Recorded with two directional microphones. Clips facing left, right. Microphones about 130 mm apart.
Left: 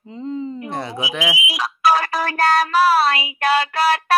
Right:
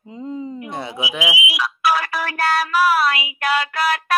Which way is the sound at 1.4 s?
40° left (ahead or behind).